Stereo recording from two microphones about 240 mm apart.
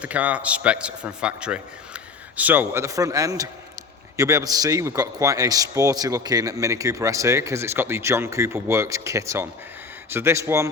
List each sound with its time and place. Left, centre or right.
0.0 s a man's voice: centre